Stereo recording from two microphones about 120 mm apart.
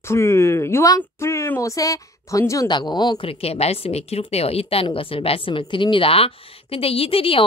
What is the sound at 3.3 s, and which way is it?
Speech, 55° left (ahead or behind).